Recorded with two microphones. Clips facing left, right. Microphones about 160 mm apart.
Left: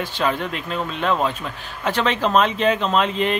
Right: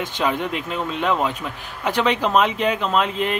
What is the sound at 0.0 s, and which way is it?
Speech, 15° right (ahead or behind).